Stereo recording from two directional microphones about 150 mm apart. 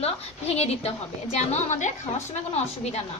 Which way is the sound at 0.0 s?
45° left (ahead or behind).